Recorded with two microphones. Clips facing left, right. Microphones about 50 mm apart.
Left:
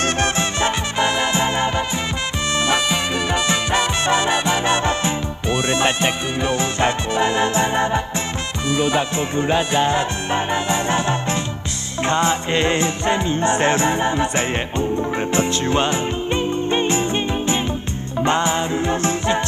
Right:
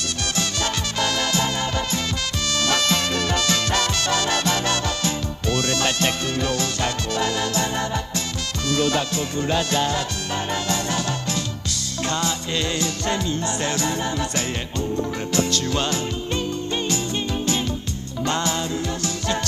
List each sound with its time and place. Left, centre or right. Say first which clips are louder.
0.2 s music: left 6 dB; left